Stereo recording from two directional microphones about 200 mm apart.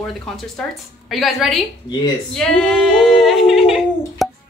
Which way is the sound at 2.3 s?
Centre (ahead or behind).